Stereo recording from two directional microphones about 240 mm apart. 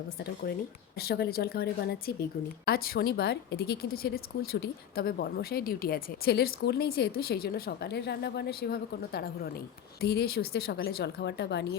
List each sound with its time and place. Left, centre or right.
0.9 s a woman's voice: left